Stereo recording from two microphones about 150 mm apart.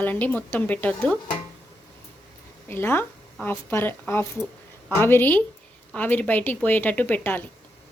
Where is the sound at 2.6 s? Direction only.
15° left (ahead or behind).